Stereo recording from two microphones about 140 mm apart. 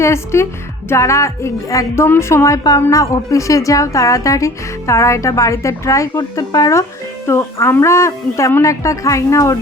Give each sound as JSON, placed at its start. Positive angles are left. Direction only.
{"t": 0.0, "sound": "a woman's voice", "side_deg": 20}